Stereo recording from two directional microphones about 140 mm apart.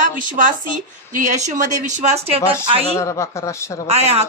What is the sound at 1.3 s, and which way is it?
Speech, 60° right (ahead or behind).